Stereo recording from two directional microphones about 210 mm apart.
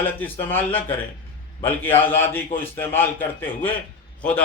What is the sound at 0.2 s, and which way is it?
Speech, 10° left (ahead or behind).